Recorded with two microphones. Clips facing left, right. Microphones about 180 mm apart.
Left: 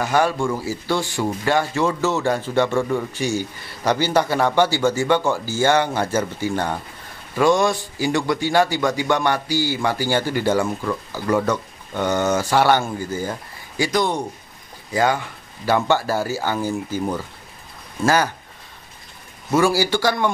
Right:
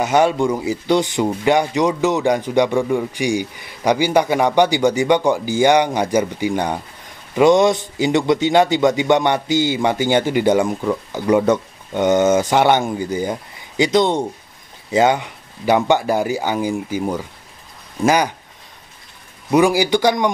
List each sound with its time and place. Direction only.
0.0 s a man's voice: 20° right (ahead or behind)
19.5 s speech: 15° right (ahead or behind)